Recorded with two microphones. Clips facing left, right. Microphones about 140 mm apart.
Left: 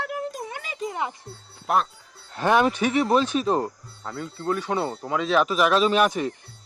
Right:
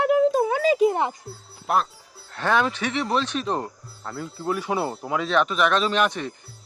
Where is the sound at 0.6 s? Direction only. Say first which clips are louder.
Right 15 dB; 80° right.